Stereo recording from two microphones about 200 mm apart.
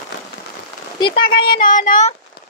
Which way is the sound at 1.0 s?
25° left (ahead or behind).